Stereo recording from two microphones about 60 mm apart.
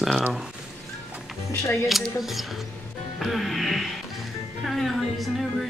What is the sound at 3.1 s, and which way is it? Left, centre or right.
Music, centre.